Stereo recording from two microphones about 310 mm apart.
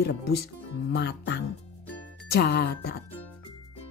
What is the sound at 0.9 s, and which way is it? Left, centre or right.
Speech, left.